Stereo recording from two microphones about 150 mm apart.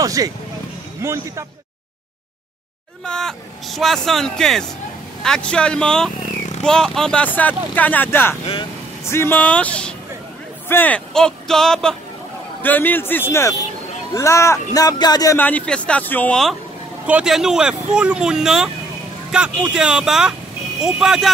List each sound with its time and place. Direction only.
0.0 s speech: 25° right (ahead or behind)
3.1 s speech: 5° left (ahead or behind); by 15.3 s 25° left (ahead or behind)
15.3 s speech: 10° left (ahead or behind)
17.0 s speech: 5° right (ahead or behind)